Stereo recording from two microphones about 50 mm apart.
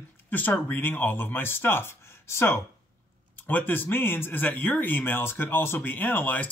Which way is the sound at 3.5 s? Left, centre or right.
Left.